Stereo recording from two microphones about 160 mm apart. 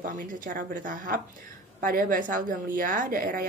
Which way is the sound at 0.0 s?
55° right (ahead or behind).